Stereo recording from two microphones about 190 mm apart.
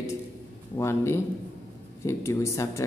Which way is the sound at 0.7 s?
15° left (ahead or behind).